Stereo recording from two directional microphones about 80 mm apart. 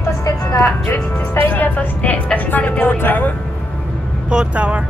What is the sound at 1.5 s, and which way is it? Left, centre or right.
A woman's voice, left.